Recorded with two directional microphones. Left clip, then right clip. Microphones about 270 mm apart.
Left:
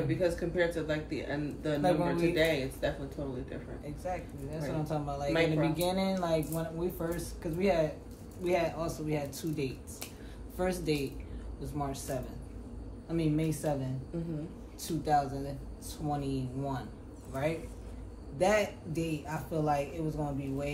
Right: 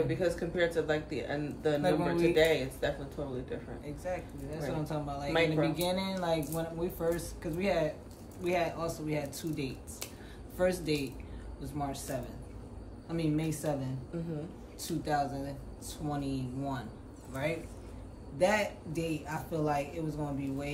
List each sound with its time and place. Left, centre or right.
0.1 s speech: centre
1.8 s speech: centre
2.3 s speech: centre
3.8 s speech: centre
14.8 s a man's voice: centre